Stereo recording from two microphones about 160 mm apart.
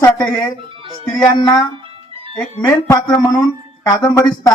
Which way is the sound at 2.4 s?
5° left (ahead or behind).